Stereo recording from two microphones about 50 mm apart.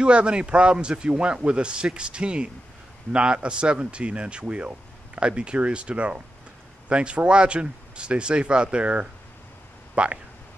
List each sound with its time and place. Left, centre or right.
0.0 s a man's voice: right